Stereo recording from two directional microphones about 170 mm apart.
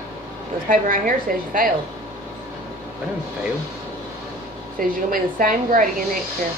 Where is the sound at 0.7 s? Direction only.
55° right (ahead or behind).